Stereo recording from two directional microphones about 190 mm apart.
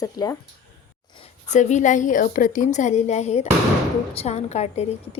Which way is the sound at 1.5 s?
40° left (ahead or behind).